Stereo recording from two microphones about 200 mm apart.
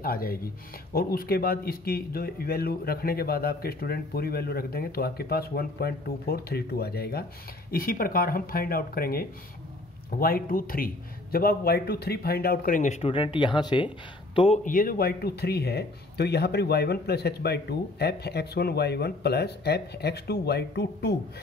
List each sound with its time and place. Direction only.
0.0 s speech: 45° left (ahead or behind); by 14.6 s 30° left (ahead or behind)
14.6 s speech: 45° left (ahead or behind)